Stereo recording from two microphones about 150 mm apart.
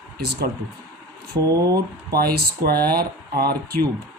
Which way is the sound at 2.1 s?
90° right.